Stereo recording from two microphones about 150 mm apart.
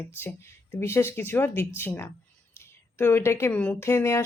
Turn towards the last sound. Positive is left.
turn(degrees=15)  # may be behind; listen again after turning